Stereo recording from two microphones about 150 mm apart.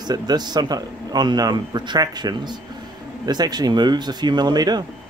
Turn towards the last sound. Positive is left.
turn(degrees=-25)  # may be behind; listen again after turning